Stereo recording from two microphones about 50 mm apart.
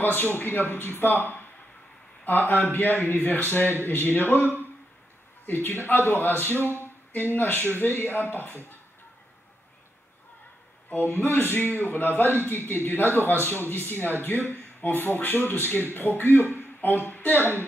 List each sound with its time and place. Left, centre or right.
0.0 s a man's voice: left
5.5 s speech: left
10.9 s speech: left
17.4 s speech: right